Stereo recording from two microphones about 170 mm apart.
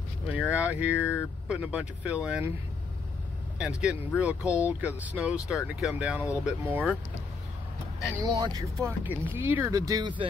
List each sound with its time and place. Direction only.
0.3 s speech: 10° right (ahead or behind)
3.5 s speech: 5° right (ahead or behind)
8.2 s speech: 20° right (ahead or behind)